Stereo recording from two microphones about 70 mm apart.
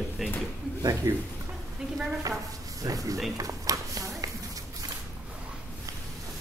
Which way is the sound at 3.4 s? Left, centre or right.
Right.